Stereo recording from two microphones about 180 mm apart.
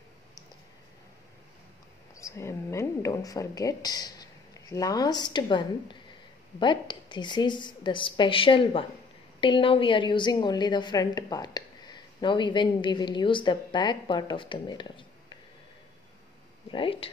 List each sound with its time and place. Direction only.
2.1 s a woman's voice: 15° left (ahead or behind)
16.7 s speech: 30° left (ahead or behind)